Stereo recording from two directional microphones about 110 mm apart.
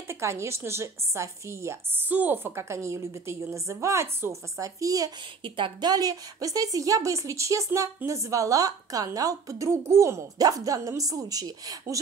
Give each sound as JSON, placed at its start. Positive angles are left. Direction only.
{"t": 0.1, "sound": "a woman's voice", "side_deg": -25}
{"t": 5.4, "sound": "a woman's voice", "side_deg": -45}